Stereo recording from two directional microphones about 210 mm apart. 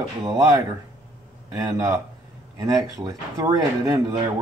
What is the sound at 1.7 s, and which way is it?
Speech, 15° right (ahead or behind).